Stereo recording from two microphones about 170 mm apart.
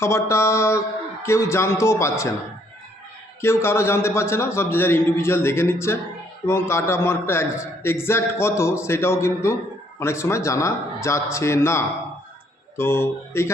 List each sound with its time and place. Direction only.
0.0 s a man's voice: 15° left (ahead or behind)
3.4 s a man's voice: 15° left (ahead or behind)